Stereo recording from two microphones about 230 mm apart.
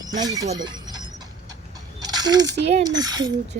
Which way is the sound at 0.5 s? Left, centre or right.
Centre.